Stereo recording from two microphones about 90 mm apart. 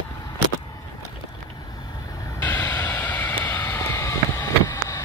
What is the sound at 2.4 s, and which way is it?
Vehicle, 25° left (ahead or behind).